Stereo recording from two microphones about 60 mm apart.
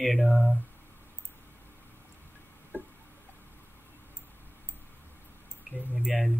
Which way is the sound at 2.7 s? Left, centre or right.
Left.